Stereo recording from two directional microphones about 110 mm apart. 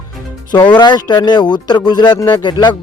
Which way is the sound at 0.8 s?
40° left (ahead or behind).